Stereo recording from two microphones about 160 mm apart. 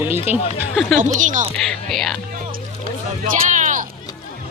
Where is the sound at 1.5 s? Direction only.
Centre (ahead or behind).